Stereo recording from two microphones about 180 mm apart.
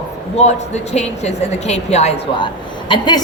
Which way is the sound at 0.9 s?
35° left (ahead or behind).